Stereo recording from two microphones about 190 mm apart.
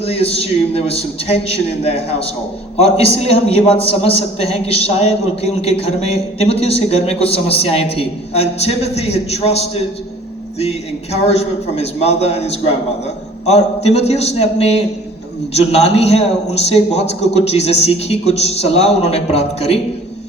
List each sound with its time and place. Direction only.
0.0 s a man's voice: 30° left (ahead or behind)